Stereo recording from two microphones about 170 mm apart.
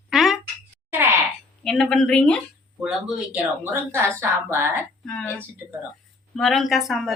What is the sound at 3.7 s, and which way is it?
Speech, 15° right (ahead or behind).